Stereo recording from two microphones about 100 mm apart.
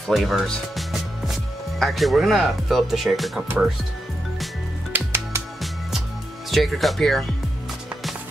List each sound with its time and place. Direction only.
0.0 s speech: centre (ahead or behind)
4.9 s music: 25° right (ahead or behind)
5.6 s music: centre (ahead or behind)
6.5 s speech: centre (ahead or behind)